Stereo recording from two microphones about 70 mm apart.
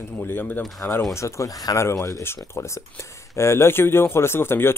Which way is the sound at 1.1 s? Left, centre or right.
Left.